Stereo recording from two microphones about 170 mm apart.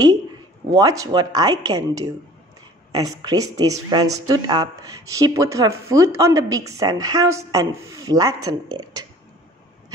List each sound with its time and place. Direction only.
0.7 s speech: 20° right (ahead or behind)